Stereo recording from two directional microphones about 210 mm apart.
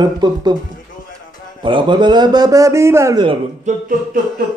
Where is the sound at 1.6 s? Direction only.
25° right (ahead or behind).